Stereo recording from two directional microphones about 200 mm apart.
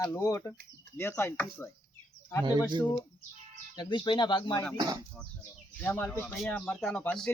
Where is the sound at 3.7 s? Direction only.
20° left (ahead or behind).